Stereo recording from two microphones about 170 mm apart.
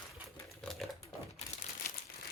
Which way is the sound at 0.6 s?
Centre (ahead or behind).